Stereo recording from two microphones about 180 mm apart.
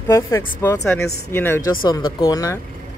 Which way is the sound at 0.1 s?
15° left (ahead or behind).